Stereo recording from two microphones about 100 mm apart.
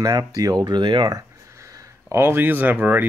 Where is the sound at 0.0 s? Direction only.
35° right (ahead or behind).